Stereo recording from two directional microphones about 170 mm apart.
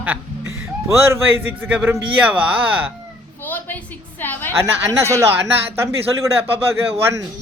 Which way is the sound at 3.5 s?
10° left (ahead or behind).